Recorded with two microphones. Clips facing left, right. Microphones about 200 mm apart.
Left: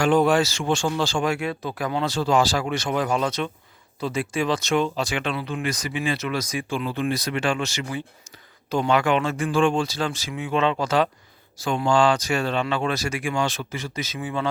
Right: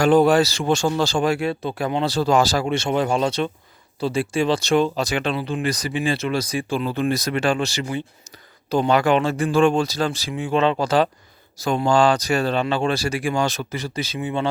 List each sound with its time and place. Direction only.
0.0 s speech: 35° right (ahead or behind)
2.6 s speech: 25° right (ahead or behind)